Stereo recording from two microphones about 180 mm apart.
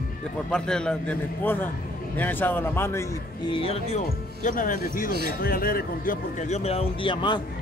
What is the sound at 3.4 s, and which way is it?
A man's voice, 30° left (ahead or behind).